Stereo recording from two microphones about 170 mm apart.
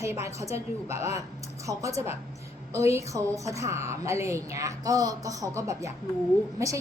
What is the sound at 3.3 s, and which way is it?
A woman's voice, 20° right (ahead or behind).